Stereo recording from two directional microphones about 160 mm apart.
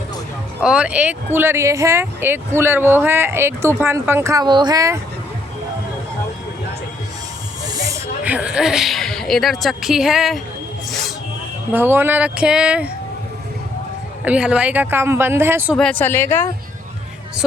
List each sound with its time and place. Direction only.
0.6 s speech: 5° right (ahead or behind); by 4.9 s 20° right (ahead or behind)
7.6 s hiss: 20° right (ahead or behind)
8.2 s a woman's voice: 10° right (ahead or behind)
11.7 s speech: 15° right (ahead or behind)
14.3 s speech: 10° right (ahead or behind)
15.7 s a woman's voice: 5° left (ahead or behind)